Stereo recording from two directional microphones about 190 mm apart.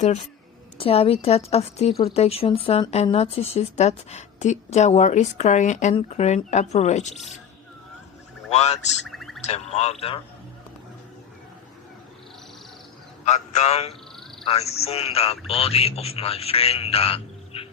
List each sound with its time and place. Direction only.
0.8 s speech: 30° left (ahead or behind)
8.4 s speech: 35° left (ahead or behind)
9.0 s a sound: centre (ahead or behind)
9.5 s speech: 35° left (ahead or behind)
13.2 s a man's voice: 35° left (ahead or behind)